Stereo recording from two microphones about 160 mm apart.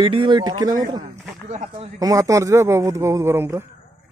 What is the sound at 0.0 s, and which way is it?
Speech, 30° right (ahead or behind).